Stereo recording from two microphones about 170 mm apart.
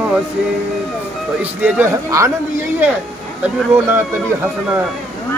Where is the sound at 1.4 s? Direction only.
10° right (ahead or behind).